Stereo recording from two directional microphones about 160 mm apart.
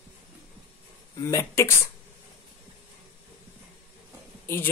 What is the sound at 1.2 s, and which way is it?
Speech, 20° left (ahead or behind).